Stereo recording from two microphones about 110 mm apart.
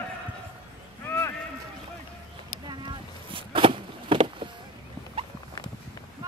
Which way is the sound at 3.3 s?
50° right (ahead or behind).